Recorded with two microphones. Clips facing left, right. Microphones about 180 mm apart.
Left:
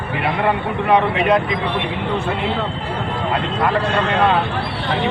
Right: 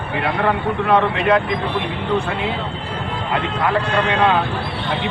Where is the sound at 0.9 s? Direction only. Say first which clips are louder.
Left 1 dB; 15° left (ahead or behind).